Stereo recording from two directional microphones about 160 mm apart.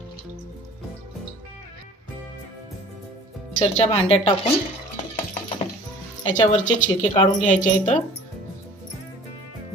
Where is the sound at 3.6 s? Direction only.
45° left (ahead or behind).